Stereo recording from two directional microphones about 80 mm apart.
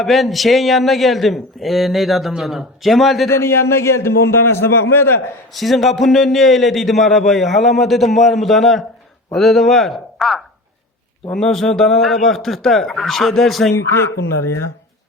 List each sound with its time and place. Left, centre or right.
0.0 s a man's voice: centre
3.2 s a man's voice: left
5.5 s a man's voice: centre
13.7 s a man's voice: left